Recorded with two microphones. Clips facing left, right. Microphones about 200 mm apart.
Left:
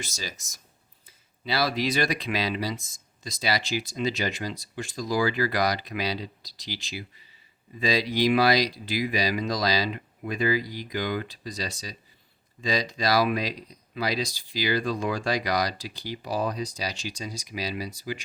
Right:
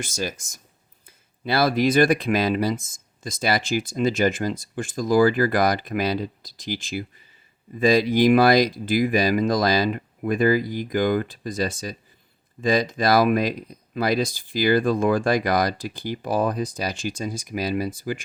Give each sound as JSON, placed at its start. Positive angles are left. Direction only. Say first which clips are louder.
{"t": 0.0, "sound": "speech", "louder": "right 9 dB", "side_deg": -50}